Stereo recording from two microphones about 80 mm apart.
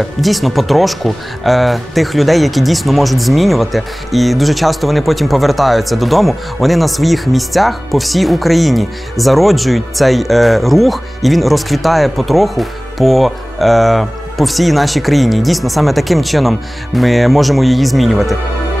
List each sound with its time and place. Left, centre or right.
0.2 s speech: centre